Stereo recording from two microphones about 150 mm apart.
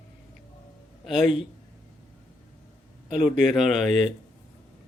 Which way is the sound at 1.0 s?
Centre (ahead or behind).